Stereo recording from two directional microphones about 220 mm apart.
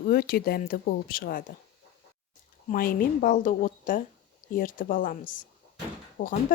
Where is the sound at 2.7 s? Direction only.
40° left (ahead or behind).